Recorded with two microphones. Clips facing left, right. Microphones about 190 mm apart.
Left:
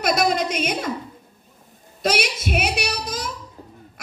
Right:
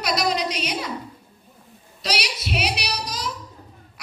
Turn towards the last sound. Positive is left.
turn(degrees=50)  # may be behind; listen again after turning